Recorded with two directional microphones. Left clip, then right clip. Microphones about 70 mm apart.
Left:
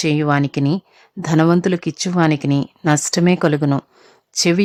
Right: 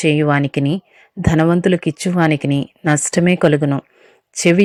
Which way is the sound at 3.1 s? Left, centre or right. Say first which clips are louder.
Right 2 dB; centre.